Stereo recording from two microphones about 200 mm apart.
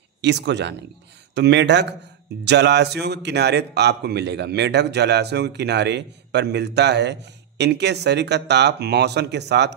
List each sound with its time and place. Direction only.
0.2 s a man's voice: 60° right (ahead or behind)